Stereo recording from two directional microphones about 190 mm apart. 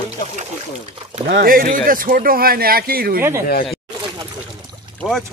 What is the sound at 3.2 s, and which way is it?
Speech, 10° right (ahead or behind).